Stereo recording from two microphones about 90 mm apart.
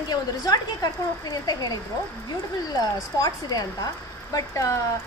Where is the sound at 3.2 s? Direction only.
45° left (ahead or behind).